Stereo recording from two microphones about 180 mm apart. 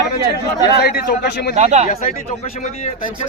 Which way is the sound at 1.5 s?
40° right (ahead or behind).